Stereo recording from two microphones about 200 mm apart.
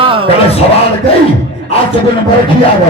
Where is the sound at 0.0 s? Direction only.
25° right (ahead or behind).